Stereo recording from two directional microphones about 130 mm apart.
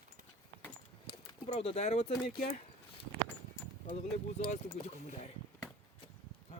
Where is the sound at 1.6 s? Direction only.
50° left (ahead or behind).